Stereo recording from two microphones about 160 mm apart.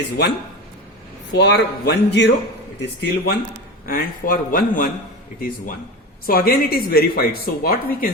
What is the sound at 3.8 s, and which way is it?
Speech, 65° left (ahead or behind).